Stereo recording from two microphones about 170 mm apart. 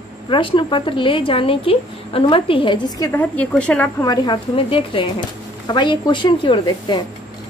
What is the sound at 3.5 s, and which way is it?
Speech, 5° left (ahead or behind).